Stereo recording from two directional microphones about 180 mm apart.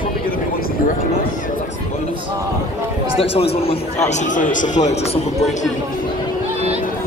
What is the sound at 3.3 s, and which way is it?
A man's voice, 35° left (ahead or behind).